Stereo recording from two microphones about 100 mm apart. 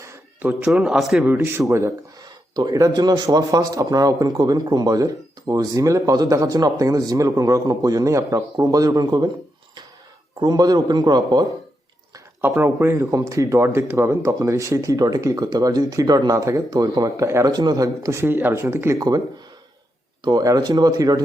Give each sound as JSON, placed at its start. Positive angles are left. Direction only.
{"t": 0.4, "sound": "a man's voice", "side_deg": -10}
{"t": 1.2, "sound": "a man's voice", "side_deg": -20}
{"t": 10.4, "sound": "a man's voice", "side_deg": -40}
{"t": 12.4, "sound": "a man's voice", "side_deg": -20}
{"t": 17.5, "sound": "speech", "side_deg": -45}
{"t": 18.9, "sound": "a man's voice", "side_deg": -40}
{"t": 20.2, "sound": "a man's voice", "side_deg": -40}